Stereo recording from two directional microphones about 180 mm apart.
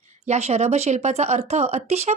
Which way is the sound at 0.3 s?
35° right (ahead or behind).